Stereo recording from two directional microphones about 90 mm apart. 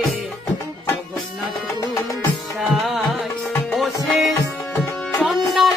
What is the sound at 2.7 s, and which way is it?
Music, centre (ahead or behind).